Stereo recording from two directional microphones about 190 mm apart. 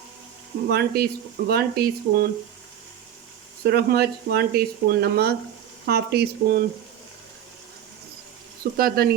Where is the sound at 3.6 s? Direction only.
55° right (ahead or behind).